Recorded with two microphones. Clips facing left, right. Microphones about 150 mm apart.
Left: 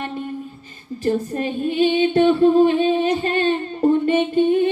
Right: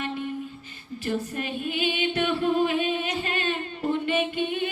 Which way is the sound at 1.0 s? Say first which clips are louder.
Left 8 dB; 35° left (ahead or behind).